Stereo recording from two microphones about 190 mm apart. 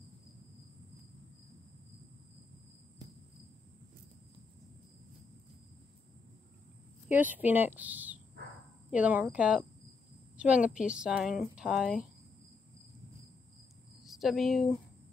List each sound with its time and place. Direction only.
3.0 s cricket: 20° right (ahead or behind)
7.1 s a woman's voice: 10° right (ahead or behind)
14.0 s speech: centre (ahead or behind)